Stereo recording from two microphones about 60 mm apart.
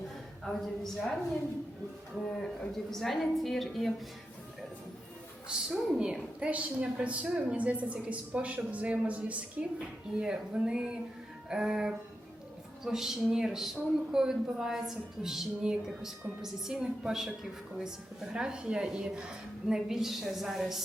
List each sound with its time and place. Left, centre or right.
0.4 s a woman's voice: centre
2.4 s a woman's voice: centre
5.5 s a woman's voice: centre